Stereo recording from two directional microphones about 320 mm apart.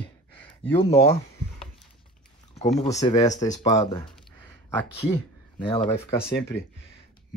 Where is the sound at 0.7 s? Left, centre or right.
Centre.